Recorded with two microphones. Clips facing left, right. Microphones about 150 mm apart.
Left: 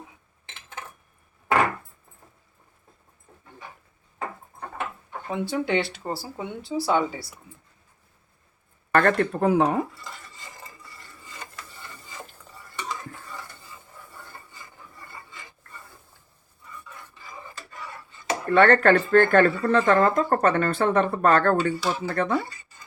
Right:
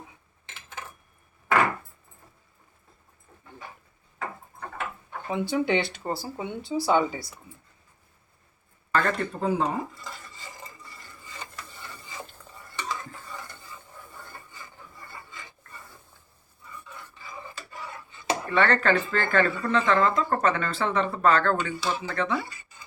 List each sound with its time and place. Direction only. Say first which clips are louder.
5.3 s speech: even; centre (ahead or behind)
8.9 s speech: left 6 dB; 65° left (ahead or behind)
18.4 s speech: left 6 dB; 55° left (ahead or behind)